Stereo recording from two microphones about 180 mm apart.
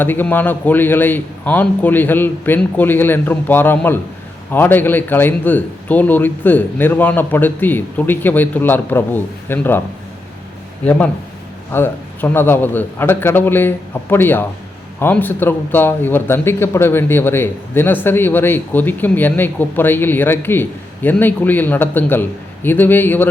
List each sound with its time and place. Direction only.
0.0 s speech: 10° left (ahead or behind)
11.7 s speech: 10° left (ahead or behind)